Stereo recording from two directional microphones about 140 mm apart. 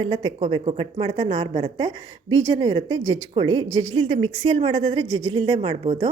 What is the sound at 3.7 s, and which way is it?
A woman's voice, 55° right (ahead or behind).